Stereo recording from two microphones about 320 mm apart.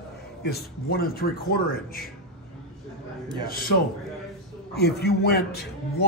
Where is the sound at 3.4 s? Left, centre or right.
Left.